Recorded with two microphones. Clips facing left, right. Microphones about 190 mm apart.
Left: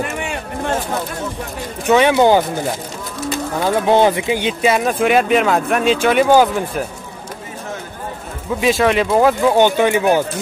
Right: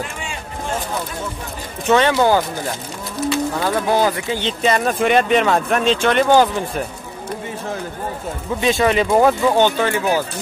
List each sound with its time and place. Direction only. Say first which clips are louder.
0.0 s a sound: left 6 dB; 60° left (ahead or behind)
1.9 s speech: left 3 dB; 15° left (ahead or behind)
3.5 s speech: left 8 dB; 15° left (ahead or behind)
8.5 s speech: left 2 dB; 5° left (ahead or behind)
9.5 s speech: left 3 dB; 15° left (ahead or behind)